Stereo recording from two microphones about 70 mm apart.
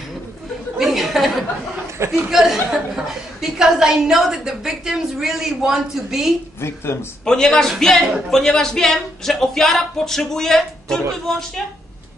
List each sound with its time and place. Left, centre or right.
0.7 s chatter: centre
2.0 s speech: right
2.3 s a man's voice: centre
6.6 s speech: left
7.2 s a man's voice: centre